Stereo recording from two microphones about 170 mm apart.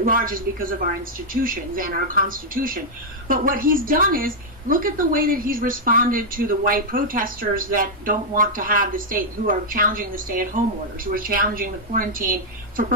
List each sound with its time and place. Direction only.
0.0 s a woman's voice: 55° right (ahead or behind)